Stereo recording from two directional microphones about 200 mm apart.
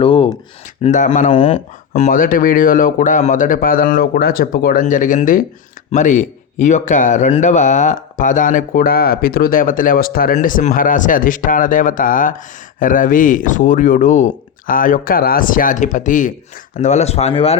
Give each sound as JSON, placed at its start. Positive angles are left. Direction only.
{"t": 0.0, "sound": "a sound", "side_deg": 25}
{"t": 0.8, "sound": "a man's voice", "side_deg": 40}
{"t": 1.9, "sound": "a man's voice", "side_deg": 40}